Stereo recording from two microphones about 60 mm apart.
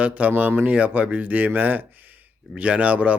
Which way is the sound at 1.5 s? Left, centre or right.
Right.